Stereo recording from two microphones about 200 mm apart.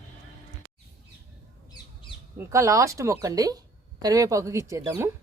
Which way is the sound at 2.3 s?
15° right (ahead or behind).